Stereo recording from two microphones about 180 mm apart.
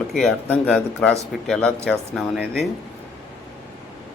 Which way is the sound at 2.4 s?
60° left (ahead or behind).